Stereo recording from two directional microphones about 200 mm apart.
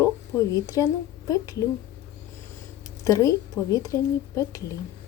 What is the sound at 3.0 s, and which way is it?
A woman's voice, 15° left (ahead or behind).